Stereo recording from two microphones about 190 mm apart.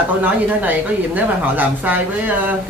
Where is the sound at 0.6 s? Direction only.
10° right (ahead or behind).